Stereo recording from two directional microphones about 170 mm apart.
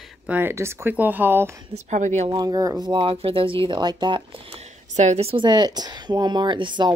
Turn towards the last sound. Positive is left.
turn(degrees=-25)  # may be behind; listen again after turning